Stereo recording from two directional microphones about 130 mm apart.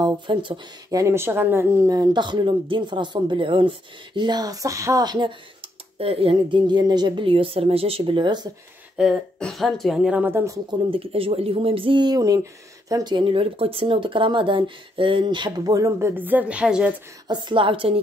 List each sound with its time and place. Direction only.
0.0 s speech: 40° right (ahead or behind)
0.8 s speech: 25° right (ahead or behind)
5.9 s a woman's voice: 45° right (ahead or behind)
8.9 s a woman's voice: centre (ahead or behind); by 10.6 s 20° right (ahead or behind)
10.7 s a woman's voice: 45° right (ahead or behind); by 16.9 s 5° right (ahead or behind)
17.3 s speech: 40° right (ahead or behind)